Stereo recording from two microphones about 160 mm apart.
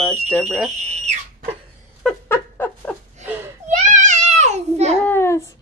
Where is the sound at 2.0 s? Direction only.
10° left (ahead or behind).